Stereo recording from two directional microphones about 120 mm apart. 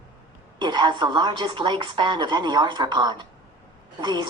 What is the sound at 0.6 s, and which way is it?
Speech, 40° right (ahead or behind).